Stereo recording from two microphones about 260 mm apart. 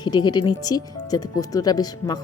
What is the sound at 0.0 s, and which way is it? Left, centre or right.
Speech, centre.